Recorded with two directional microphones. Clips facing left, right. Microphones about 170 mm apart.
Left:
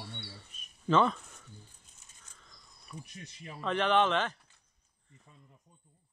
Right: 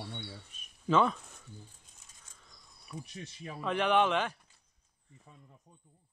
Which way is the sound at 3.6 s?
10° right (ahead or behind).